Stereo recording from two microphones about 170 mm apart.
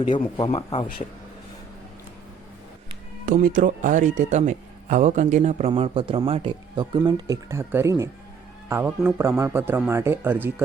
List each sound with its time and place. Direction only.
0.1 s speech: 30° left (ahead or behind)
3.2 s speech: 50° right (ahead or behind); by 10.5 s 10° right (ahead or behind)